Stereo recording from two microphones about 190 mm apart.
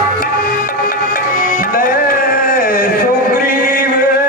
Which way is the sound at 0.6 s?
45° left (ahead or behind).